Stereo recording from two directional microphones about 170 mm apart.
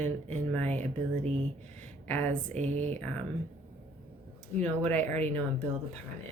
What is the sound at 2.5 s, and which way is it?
Speech, 40° right (ahead or behind).